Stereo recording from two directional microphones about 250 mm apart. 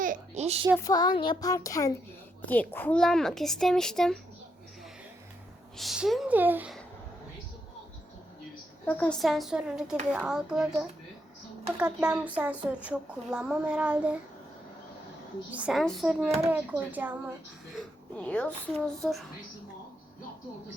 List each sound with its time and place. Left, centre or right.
0.0 s a child's voice: right
0.9 s a child's voice: centre
5.7 s a woman's voice: centre
8.9 s a woman's voice: centre
15.5 s a woman's voice: centre
17.7 s a woman's voice: centre